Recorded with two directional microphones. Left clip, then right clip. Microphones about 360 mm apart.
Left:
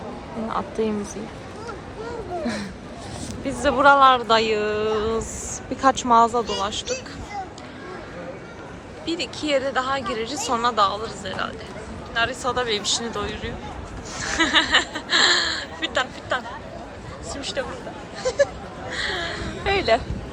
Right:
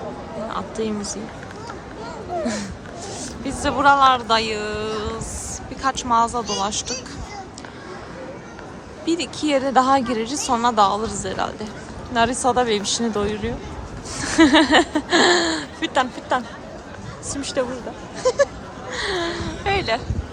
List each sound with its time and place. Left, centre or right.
0.5 s speech: centre
3.4 s speech: centre
9.0 s a woman's voice: centre
17.4 s speech: centre
18.9 s a sound: centre